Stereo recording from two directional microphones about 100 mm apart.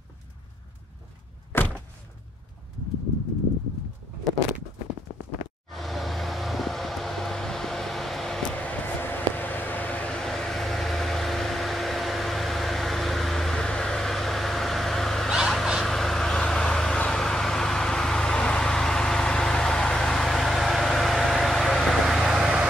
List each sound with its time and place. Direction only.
1.5 s a sound: 20° left (ahead or behind)
5.7 s vehicle: centre (ahead or behind)
8.5 s vehicle: 15° left (ahead or behind); by 22.7 s 5° right (ahead or behind)